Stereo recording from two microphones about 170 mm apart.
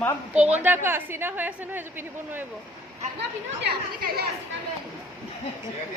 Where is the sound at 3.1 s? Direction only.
70° right (ahead or behind).